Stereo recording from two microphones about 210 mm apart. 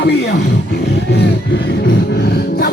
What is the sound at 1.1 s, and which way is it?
Music, 50° left (ahead or behind).